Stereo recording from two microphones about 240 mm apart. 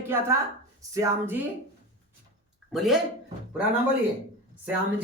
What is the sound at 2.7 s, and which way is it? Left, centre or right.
Speech, centre.